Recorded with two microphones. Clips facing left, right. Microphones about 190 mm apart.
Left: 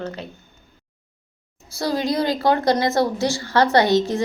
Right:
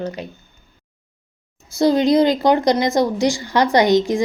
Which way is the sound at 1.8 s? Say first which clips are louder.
Right 8 dB; 20° right (ahead or behind).